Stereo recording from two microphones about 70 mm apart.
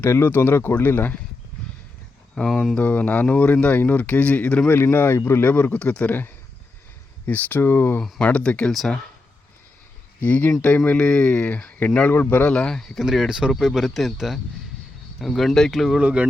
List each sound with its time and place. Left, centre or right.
0.1 s speech: left
2.3 s speech: centre
2.7 s speech: left
8.2 s speech: centre
10.2 s speech: left
12.5 s speech: centre
13.0 s speech: centre
16.0 s speech: centre